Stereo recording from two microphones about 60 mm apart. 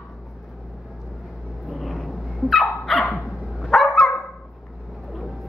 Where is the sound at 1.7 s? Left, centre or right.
Centre.